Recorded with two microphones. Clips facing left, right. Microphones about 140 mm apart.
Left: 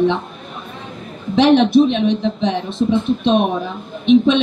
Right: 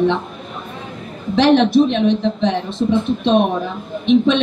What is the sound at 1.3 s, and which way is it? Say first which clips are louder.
A woman's voice: left 1 dB; centre (ahead or behind).